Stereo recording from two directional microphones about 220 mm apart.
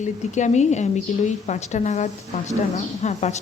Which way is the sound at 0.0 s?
35° left (ahead or behind).